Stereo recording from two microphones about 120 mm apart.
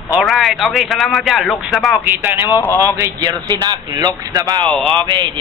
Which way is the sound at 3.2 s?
35° right (ahead or behind).